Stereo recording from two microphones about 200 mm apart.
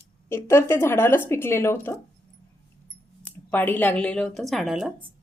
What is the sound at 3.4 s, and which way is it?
A woman's voice, 10° left (ahead or behind).